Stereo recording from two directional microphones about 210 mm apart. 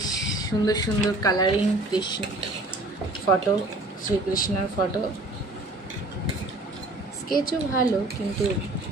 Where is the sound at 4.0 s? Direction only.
40° left (ahead or behind).